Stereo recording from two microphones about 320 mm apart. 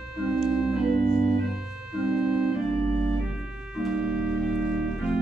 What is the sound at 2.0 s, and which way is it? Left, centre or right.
Organ, centre.